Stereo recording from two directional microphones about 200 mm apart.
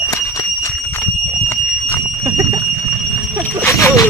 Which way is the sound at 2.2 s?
15° right (ahead or behind).